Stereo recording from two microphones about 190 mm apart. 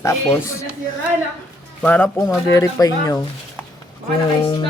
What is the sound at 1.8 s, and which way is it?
Speech, 5° left (ahead or behind).